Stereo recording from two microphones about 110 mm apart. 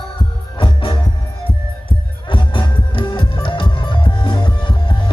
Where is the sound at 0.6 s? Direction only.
50° left (ahead or behind).